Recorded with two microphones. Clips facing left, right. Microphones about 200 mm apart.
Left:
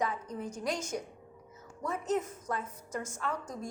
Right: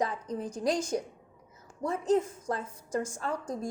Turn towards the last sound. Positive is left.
turn(degrees=-30)  # may be behind; listen again after turning